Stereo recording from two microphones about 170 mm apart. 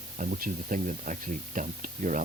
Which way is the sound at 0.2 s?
55° right (ahead or behind).